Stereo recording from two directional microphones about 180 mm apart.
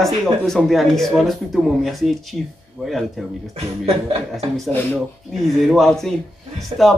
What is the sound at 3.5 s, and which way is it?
Speech, 35° right (ahead or behind).